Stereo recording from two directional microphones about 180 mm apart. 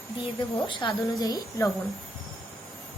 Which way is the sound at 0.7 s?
25° left (ahead or behind).